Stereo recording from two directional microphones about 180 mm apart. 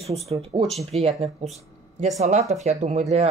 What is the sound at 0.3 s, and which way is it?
Speech, 35° right (ahead or behind).